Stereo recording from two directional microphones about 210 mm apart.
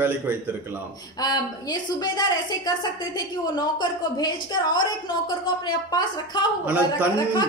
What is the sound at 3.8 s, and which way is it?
Speech, 20° left (ahead or behind).